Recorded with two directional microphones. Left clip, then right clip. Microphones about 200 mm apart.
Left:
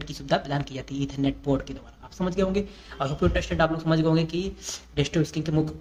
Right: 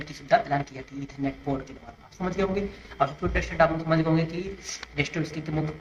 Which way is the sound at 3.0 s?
45° left (ahead or behind).